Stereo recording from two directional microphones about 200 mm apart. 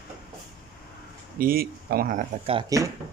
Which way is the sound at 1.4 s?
50° right (ahead or behind).